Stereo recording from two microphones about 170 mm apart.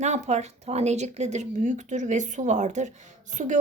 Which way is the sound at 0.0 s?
40° right (ahead or behind).